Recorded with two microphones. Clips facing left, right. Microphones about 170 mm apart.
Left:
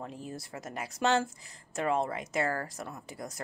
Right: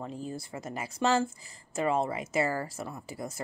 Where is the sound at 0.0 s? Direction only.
Centre (ahead or behind).